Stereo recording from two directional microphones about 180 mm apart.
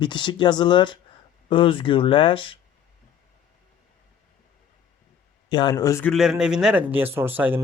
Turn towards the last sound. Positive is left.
turn(degrees=-10)  # may be behind; listen again after turning